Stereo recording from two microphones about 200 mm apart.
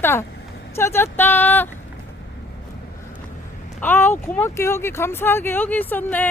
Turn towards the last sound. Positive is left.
turn(degrees=10)  # may be behind; listen again after turning